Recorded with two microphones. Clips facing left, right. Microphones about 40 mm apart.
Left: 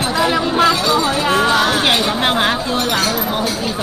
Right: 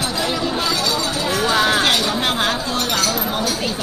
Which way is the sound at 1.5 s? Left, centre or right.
Centre.